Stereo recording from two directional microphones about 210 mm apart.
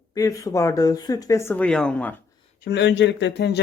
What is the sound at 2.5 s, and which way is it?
Speech, 50° left (ahead or behind).